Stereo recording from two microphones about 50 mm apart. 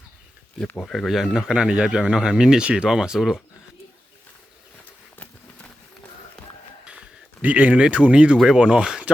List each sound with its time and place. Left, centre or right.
0.8 s speech: centre
1.4 s speech: centre
2.9 s speech: centre
7.4 s speech: right